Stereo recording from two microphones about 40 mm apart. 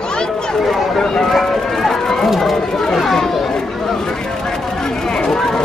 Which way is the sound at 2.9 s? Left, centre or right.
Centre.